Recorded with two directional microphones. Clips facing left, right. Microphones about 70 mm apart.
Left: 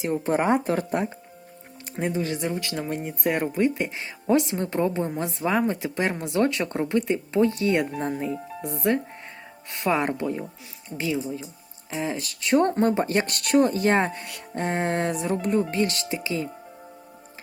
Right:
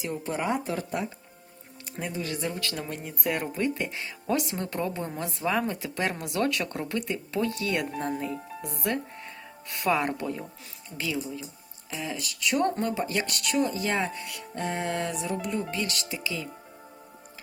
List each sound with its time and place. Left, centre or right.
0.0 s speech: left
2.0 s speech: left